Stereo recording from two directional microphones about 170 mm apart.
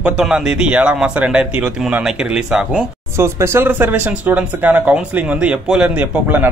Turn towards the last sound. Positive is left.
turn(degrees=-10)  # may be behind; listen again after turning